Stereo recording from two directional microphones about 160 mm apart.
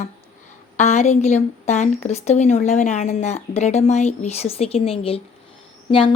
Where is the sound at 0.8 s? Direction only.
45° left (ahead or behind).